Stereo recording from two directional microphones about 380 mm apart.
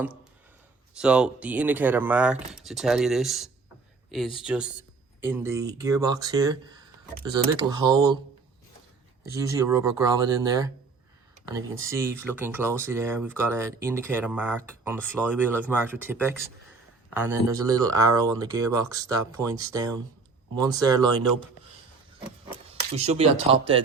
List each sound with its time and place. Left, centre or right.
0.9 s speech: centre
9.3 s speech: centre
23.0 s speech: centre